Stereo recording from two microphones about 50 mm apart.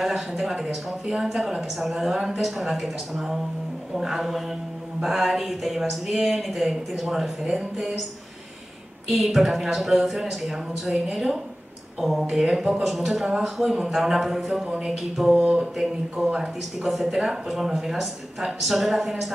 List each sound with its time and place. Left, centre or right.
0.0 s speech: centre
2.1 s speech: centre
2.4 s speech: centre
9.1 s speech: centre